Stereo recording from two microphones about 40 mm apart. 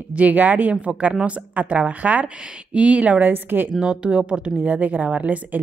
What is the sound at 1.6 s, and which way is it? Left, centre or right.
A woman's voice, right.